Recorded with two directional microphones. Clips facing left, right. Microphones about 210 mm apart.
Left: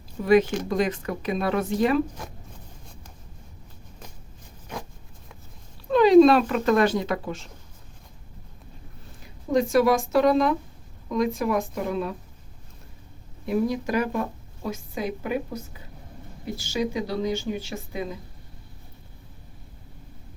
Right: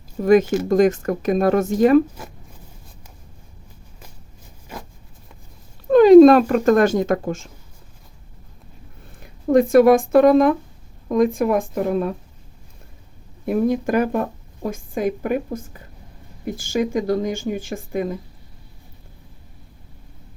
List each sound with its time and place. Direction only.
0.2 s speech: 45° right (ahead or behind)
0.4 s speech: 5° right (ahead or behind)
0.7 s speech: 45° right (ahead or behind)
2.2 s speech: 5° right (ahead or behind)
5.9 s speech: 50° right (ahead or behind)
9.2 s speech: 55° right (ahead or behind)
13.4 s speech: 50° right (ahead or behind)